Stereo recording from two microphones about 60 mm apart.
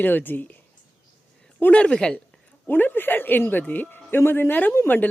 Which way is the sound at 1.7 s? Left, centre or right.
Centre.